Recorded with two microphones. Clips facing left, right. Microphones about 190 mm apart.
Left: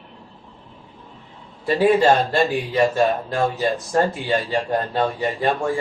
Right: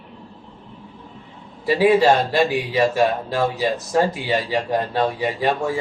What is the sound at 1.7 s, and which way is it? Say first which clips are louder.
Speech: right 1 dB; 10° right (ahead or behind).